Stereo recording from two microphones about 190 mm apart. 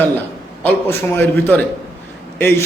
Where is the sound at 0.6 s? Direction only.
10° left (ahead or behind).